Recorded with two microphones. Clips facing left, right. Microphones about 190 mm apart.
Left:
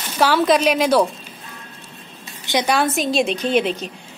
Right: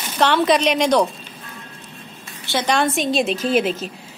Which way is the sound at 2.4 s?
15° left (ahead or behind).